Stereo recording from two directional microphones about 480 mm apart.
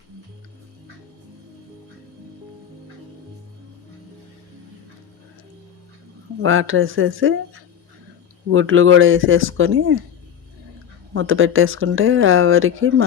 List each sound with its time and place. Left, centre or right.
6.4 s speech: right
11.1 s speech: right